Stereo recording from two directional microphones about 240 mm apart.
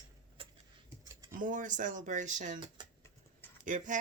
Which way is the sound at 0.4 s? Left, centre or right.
Right.